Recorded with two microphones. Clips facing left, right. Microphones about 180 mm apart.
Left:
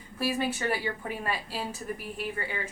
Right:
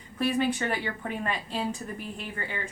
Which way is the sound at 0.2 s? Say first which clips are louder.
Right 3 dB; 5° left (ahead or behind).